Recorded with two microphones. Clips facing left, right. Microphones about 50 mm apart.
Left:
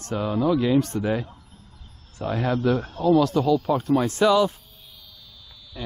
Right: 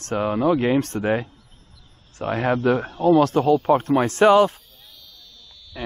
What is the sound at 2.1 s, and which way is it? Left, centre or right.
Speech, right.